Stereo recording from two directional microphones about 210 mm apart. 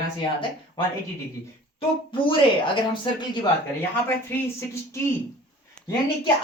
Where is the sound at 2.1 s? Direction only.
25° left (ahead or behind).